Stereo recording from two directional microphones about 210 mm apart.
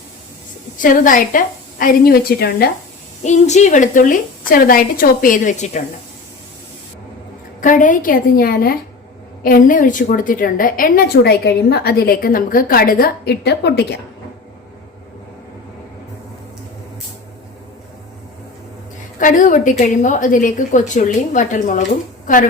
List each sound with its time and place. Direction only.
0.8 s a woman's voice: 40° left (ahead or behind)
3.2 s a woman's voice: 35° left (ahead or behind)
7.6 s a woman's voice: 40° left (ahead or behind); by 14.0 s 55° left (ahead or behind)
19.2 s a woman's voice: 40° left (ahead or behind)